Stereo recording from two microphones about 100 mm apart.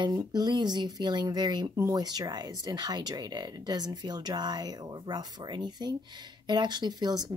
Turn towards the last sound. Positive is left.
turn(degrees=-45)  # may be behind; listen again after turning